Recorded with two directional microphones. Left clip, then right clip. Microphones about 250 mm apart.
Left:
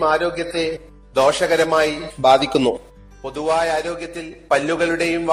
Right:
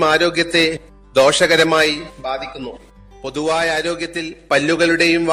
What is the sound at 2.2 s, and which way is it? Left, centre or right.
Speech, centre.